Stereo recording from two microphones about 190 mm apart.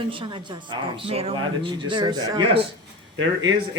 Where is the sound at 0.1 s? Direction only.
25° right (ahead or behind).